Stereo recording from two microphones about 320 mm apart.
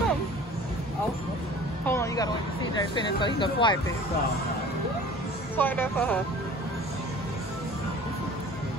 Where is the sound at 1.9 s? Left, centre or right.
Centre.